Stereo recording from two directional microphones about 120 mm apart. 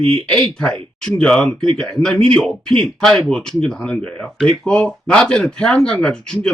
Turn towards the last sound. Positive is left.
turn(degrees=5)  # may be behind; listen again after turning